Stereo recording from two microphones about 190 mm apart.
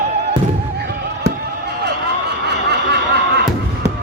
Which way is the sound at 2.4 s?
65° right (ahead or behind).